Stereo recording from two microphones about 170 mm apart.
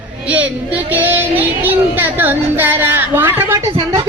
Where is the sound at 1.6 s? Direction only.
10° right (ahead or behind).